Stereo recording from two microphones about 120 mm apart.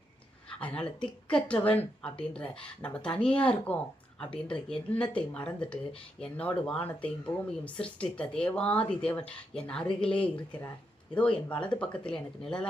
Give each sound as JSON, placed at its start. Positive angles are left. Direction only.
{"t": 0.6, "sound": "speech", "side_deg": 10}